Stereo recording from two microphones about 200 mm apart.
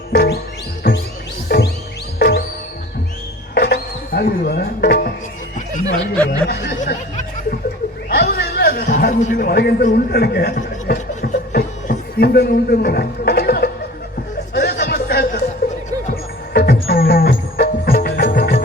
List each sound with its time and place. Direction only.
0.1 s music: 55° left (ahead or behind)
3.5 s music: 55° left (ahead or behind)
6.5 s speech: 50° left (ahead or behind)
8.1 s a sound: 55° left (ahead or behind)
16.5 s music: 50° left (ahead or behind)